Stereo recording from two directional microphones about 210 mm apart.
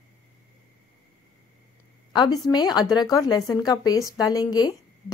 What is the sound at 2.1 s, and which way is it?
A woman's voice, 20° left (ahead or behind).